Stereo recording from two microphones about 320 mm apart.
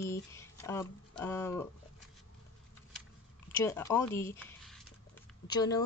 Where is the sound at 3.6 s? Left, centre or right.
Centre.